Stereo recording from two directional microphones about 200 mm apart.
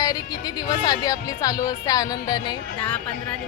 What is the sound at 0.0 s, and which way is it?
Speech, 20° left (ahead or behind).